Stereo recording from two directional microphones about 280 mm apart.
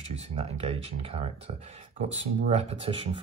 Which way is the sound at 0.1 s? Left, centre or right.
Right.